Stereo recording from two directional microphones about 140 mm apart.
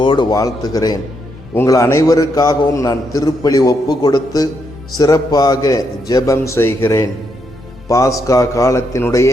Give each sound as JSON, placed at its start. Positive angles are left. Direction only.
{"t": 0.0, "sound": "a man's voice", "side_deg": 35}